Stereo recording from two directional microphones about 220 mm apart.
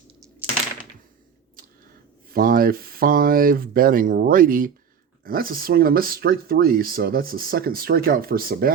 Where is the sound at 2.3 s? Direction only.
40° right (ahead or behind).